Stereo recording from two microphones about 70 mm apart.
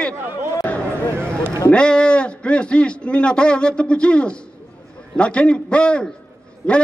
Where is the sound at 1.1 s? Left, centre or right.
Right.